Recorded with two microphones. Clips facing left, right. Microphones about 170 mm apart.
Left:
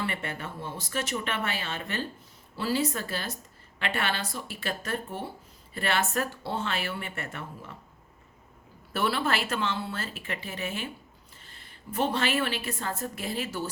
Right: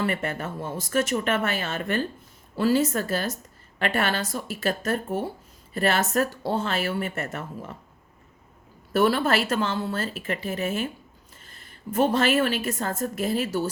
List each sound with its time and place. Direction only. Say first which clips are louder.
0.0 s a woman's voice: right 6 dB; 45° right (ahead or behind)
8.9 s a woman's voice: right 7 dB; 45° right (ahead or behind)